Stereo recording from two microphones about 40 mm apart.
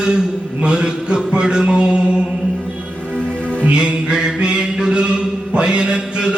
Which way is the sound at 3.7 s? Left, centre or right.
Right.